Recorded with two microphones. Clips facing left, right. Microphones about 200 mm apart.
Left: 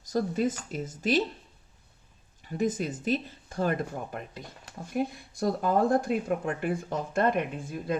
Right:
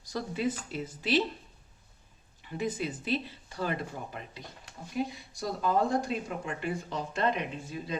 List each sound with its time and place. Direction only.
0.0 s speech: 45° left (ahead or behind)
2.4 s speech: 45° left (ahead or behind)